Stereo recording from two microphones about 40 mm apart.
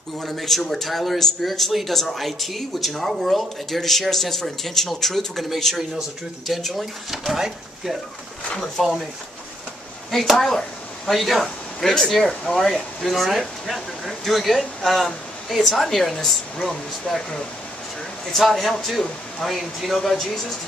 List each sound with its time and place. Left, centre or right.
0.2 s speech: centre
8.8 s speech: centre
10.1 s speech: centre